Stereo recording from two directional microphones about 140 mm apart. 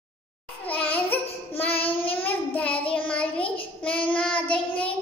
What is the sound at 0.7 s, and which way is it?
Babbling, 10° left (ahead or behind).